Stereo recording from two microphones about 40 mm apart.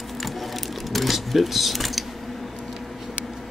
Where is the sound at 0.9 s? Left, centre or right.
Centre.